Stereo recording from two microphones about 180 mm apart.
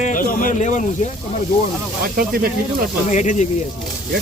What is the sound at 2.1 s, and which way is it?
Speech, 55° right (ahead or behind).